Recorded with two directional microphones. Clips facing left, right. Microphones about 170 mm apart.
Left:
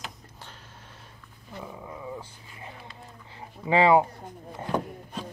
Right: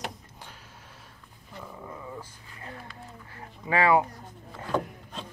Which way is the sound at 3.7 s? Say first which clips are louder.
Left 3 dB; 25° left (ahead or behind).